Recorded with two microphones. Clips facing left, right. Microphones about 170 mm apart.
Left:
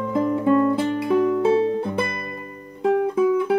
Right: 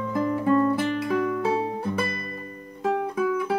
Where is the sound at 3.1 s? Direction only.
25° left (ahead or behind).